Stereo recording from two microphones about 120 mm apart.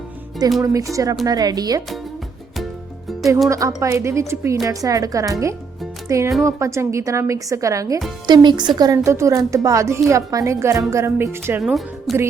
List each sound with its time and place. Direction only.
0.6 s a woman's voice: 30° right (ahead or behind)
3.5 s a woman's voice: 25° right (ahead or behind)
9.0 s speech: 25° right (ahead or behind)
11.6 s speech: centre (ahead or behind)